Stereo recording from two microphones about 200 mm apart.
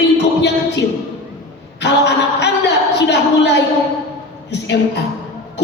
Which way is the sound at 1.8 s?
60° left (ahead or behind).